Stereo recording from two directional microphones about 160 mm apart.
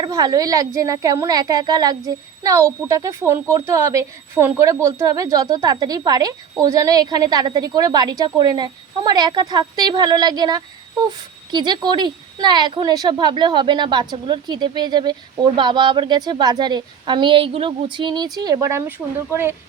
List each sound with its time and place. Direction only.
0.0 s a woman's voice: 25° right (ahead or behind)